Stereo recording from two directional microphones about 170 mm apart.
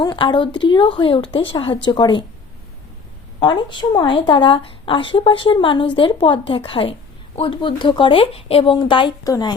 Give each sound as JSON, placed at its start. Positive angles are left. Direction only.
{"t": 0.0, "sound": "speech", "side_deg": 25}
{"t": 3.4, "sound": "speech", "side_deg": 25}